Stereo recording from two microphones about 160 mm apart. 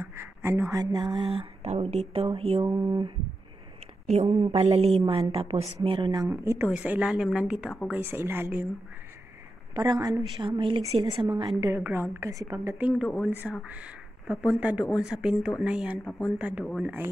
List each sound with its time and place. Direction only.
0.0 s speech: 15° right (ahead or behind)
1.6 s a woman's voice: 40° right (ahead or behind)
2.6 s a woman's voice: 25° right (ahead or behind)
4.1 s a woman's voice: 40° right (ahead or behind)
6.2 s a woman's voice: 15° right (ahead or behind)
9.8 s a woman's voice: 25° right (ahead or behind)
12.7 s a woman's voice: 10° right (ahead or behind)